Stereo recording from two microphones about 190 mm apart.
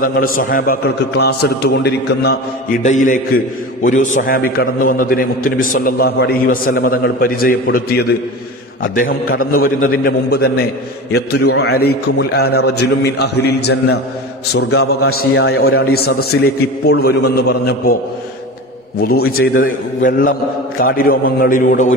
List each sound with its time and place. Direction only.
0.0 s a man's voice: 50° left (ahead or behind)
2.8 s a man's voice: 40° left (ahead or behind)
9.8 s a man's voice: 90° left
10.3 s a man's voice: 55° left (ahead or behind)
18.9 s a man's voice: 55° left (ahead or behind)